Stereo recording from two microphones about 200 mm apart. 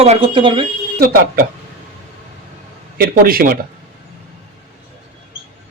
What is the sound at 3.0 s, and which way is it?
Speech, 45° right (ahead or behind).